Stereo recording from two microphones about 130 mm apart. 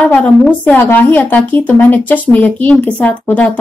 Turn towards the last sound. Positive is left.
turn(degrees=10)  # may be behind; listen again after turning